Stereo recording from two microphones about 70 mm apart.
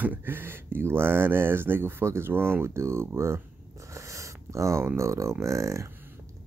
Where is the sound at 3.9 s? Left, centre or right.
Right.